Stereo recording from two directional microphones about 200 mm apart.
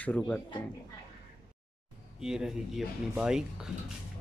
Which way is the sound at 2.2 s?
5° right (ahead or behind).